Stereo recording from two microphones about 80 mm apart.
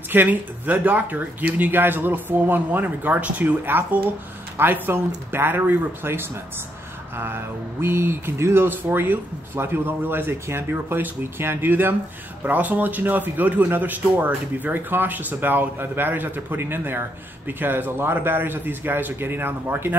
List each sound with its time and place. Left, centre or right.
0.1 s speech: right